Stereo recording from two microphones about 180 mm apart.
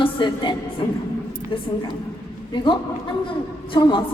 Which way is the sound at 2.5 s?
25° left (ahead or behind).